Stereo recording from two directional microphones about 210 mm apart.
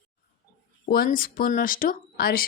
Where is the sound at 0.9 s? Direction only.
45° left (ahead or behind).